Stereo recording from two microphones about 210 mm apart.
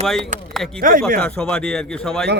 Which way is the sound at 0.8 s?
40° right (ahead or behind).